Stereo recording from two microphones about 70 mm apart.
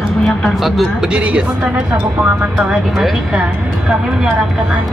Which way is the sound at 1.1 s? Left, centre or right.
Centre.